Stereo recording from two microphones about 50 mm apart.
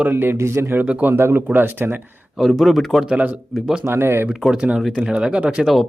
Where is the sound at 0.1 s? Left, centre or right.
Right.